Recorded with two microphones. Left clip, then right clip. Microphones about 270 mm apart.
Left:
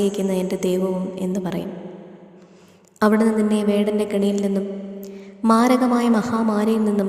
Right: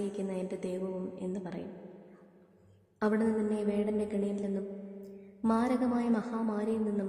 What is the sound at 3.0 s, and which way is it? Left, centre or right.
A woman's voice, left.